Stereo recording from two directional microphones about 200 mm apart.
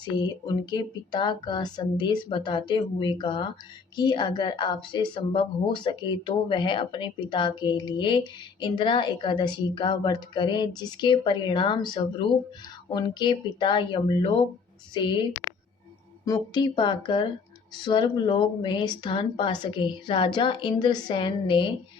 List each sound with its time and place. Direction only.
0.0 s a woman's voice: 20° left (ahead or behind)
16.2 s a woman's voice: 20° left (ahead or behind)